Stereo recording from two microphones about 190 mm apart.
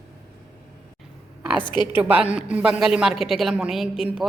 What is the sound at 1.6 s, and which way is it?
Speech, 25° left (ahead or behind).